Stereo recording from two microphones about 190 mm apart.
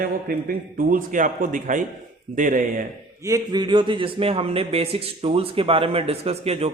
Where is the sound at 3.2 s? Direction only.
20° right (ahead or behind).